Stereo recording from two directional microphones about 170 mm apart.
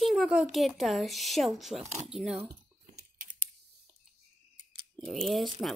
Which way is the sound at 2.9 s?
50° right (ahead or behind).